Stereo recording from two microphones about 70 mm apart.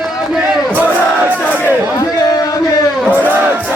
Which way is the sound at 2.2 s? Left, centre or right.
Left.